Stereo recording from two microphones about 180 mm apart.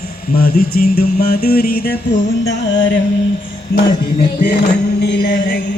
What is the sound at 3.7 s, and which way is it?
Music, 60° left (ahead or behind).